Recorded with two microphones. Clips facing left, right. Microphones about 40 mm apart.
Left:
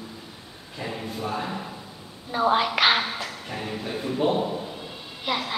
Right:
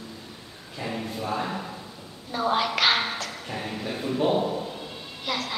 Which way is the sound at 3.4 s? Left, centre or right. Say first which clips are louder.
Right 1 dB; centre.